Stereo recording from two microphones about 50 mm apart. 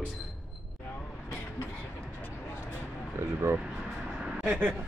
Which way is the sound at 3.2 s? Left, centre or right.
Right.